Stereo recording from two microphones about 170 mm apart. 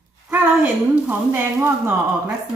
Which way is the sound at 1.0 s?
15° right (ahead or behind).